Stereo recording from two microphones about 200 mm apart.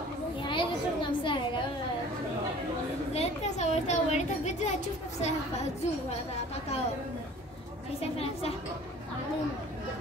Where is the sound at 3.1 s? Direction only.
30° left (ahead or behind).